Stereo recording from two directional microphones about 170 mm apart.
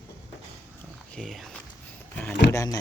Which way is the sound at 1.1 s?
Centre (ahead or behind).